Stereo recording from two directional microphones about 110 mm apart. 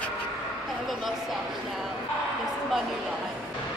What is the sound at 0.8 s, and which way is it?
Speech, centre (ahead or behind).